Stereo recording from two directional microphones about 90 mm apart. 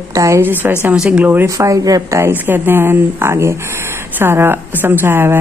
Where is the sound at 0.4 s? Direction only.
20° right (ahead or behind).